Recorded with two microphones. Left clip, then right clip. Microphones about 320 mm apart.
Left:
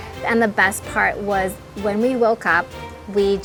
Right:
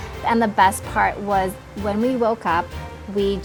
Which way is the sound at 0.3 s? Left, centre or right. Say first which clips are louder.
Right 1 dB; left.